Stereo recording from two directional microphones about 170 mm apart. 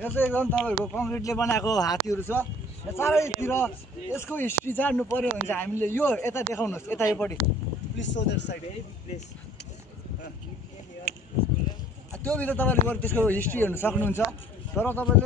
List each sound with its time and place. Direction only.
0.0 s a man's voice: 10° left (ahead or behind)
8.0 s speech: 90° left
12.3 s a man's voice: 10° left (ahead or behind)